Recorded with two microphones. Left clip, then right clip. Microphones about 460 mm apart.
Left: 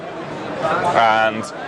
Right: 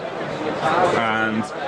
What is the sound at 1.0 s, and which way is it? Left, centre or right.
Speech, left.